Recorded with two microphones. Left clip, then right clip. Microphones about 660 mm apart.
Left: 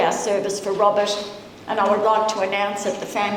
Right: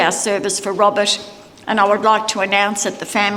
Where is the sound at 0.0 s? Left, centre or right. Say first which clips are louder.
Right 3 dB; right.